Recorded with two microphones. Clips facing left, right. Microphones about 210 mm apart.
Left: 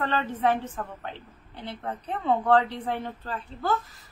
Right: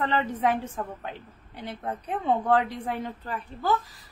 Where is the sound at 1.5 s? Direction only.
15° right (ahead or behind).